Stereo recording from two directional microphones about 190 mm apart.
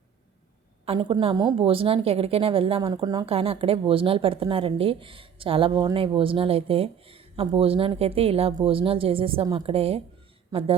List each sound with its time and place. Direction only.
0.9 s a woman's voice: 25° right (ahead or behind)